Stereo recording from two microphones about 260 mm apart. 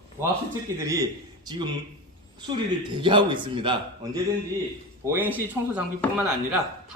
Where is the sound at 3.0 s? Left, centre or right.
Centre.